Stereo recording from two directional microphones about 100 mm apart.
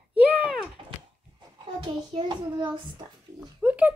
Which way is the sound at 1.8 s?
50° right (ahead or behind).